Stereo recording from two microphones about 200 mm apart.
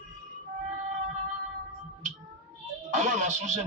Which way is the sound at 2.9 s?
35° right (ahead or behind).